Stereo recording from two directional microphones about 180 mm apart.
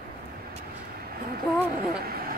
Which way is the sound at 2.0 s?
55° right (ahead or behind).